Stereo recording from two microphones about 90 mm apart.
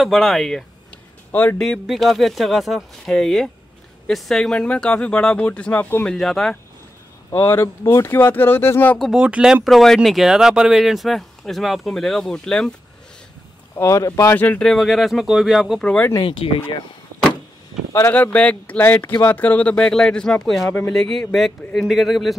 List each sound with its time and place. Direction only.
0.0 s speech: centre (ahead or behind)
1.3 s speech: 20° left (ahead or behind)
1.6 s speech: centre (ahead or behind); by 6.0 s 20° left (ahead or behind)
6.0 s speech: 5° left (ahead or behind)
7.2 s speech: 30° left (ahead or behind)
9.1 s speech: 10° right (ahead or behind)
9.7 s speech: centre (ahead or behind)
13.7 s speech: 35° left (ahead or behind)
14.3 s speech: 20° left (ahead or behind)
14.6 s speech: 5° left (ahead or behind)
16.2 s speech: 75° left (ahead or behind)
18.1 s speech: 15° left (ahead or behind)